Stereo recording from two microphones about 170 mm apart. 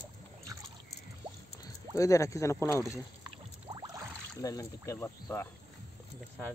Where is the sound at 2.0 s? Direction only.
20° left (ahead or behind).